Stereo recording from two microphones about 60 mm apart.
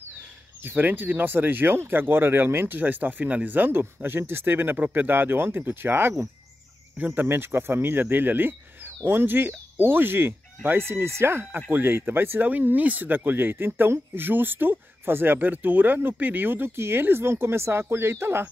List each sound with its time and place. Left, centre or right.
0.6 s speech: right